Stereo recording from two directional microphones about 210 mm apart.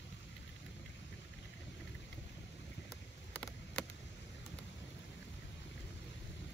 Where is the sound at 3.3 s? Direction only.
5° left (ahead or behind).